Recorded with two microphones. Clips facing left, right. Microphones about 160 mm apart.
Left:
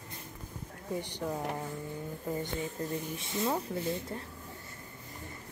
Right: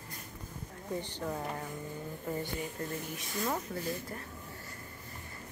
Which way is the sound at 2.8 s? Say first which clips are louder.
Left 3 dB; 20° left (ahead or behind).